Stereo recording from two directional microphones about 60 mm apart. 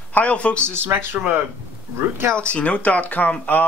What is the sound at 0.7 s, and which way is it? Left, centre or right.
Speech, right.